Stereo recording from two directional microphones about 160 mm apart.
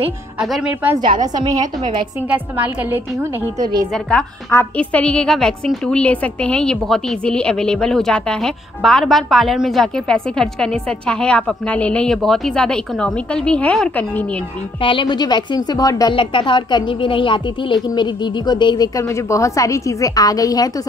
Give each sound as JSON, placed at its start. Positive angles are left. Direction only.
{"t": 0.4, "sound": "a woman's voice", "side_deg": -5}
{"t": 1.2, "sound": "a woman's voice", "side_deg": -25}
{"t": 2.2, "sound": "a woman's voice", "side_deg": -10}
{"t": 3.9, "sound": "a woman's voice", "side_deg": 5}
{"t": 14.8, "sound": "speech", "side_deg": 30}